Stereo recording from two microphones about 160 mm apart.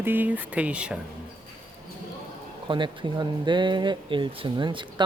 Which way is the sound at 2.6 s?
30° right (ahead or behind).